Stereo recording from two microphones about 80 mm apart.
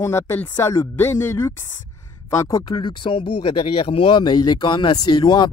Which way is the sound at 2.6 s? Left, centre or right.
Left.